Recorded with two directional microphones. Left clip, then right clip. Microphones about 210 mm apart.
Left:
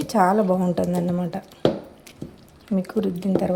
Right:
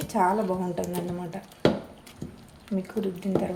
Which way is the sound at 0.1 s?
40° left (ahead or behind).